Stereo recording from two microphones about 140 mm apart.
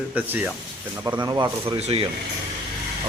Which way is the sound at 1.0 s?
30° right (ahead or behind).